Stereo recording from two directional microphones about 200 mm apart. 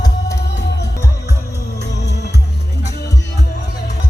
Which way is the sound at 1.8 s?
60° left (ahead or behind).